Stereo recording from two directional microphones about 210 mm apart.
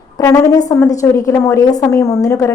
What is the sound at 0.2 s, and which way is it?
A woman's voice, 15° left (ahead or behind).